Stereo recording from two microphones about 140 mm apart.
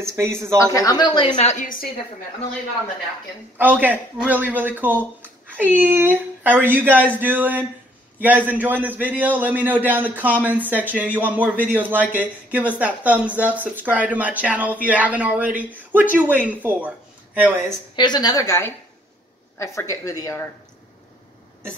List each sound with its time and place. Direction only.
0.0 s speech: 20° right (ahead or behind)
0.6 s speech: 25° left (ahead or behind)
1.4 s a woman's voice: 60° left (ahead or behind)
3.5 s speech: 15° right (ahead or behind)
17.9 s a woman's voice: 30° left (ahead or behind)